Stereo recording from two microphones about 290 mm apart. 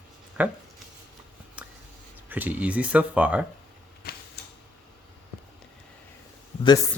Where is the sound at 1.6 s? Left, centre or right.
Centre.